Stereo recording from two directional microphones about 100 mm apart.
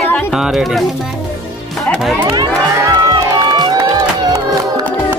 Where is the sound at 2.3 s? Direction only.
45° right (ahead or behind).